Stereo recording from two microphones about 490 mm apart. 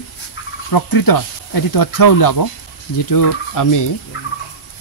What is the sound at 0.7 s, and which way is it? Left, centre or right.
Speech, left.